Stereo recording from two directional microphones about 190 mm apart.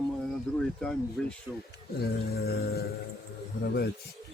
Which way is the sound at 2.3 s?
55° left (ahead or behind).